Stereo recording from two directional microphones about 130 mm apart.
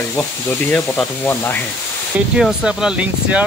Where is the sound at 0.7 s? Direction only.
15° left (ahead or behind).